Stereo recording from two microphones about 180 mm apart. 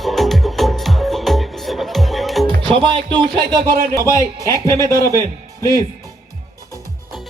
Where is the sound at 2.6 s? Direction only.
30° right (ahead or behind).